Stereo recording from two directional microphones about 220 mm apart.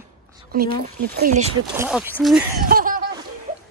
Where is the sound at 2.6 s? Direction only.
40° right (ahead or behind).